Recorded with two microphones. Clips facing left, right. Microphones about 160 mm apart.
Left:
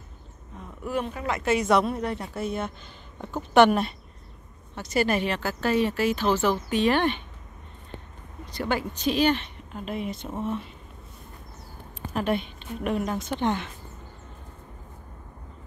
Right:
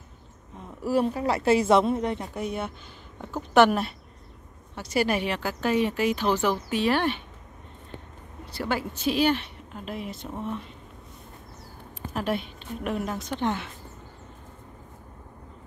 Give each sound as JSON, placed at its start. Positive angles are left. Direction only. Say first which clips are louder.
{"t": 0.7, "sound": "speech", "louder": "right 5 dB", "side_deg": -35}
{"t": 8.5, "sound": "speech", "louder": "left 1 dB", "side_deg": -5}
{"t": 12.1, "sound": "speech", "louder": "left 2 dB", "side_deg": 0}